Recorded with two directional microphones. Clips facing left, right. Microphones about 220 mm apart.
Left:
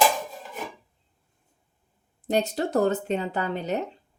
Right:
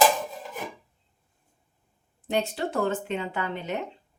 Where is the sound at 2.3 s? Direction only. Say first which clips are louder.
Left 3 dB; 40° left (ahead or behind).